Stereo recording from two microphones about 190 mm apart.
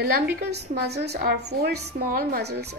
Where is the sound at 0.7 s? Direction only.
60° right (ahead or behind).